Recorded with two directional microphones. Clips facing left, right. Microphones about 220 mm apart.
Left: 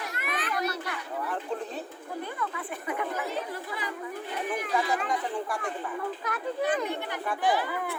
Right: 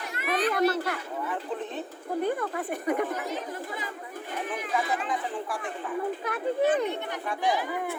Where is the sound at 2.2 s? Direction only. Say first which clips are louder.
Right 8 dB; 45° right (ahead or behind).